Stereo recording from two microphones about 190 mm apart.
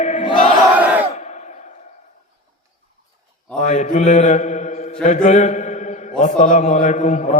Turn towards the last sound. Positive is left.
turn(degrees=40)  # may be behind; listen again after turning